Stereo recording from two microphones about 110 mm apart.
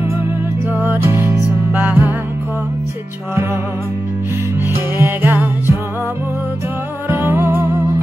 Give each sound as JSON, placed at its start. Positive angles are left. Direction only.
{"t": 0.7, "sound": "music", "side_deg": -20}
{"t": 4.9, "sound": "music", "side_deg": -20}
{"t": 7.1, "sound": "music", "side_deg": -20}